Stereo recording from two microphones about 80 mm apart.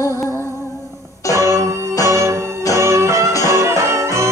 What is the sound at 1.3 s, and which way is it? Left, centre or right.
Music, right.